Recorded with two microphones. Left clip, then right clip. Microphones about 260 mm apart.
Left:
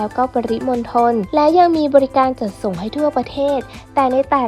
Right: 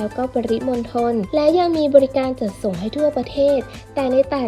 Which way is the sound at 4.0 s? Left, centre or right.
Centre.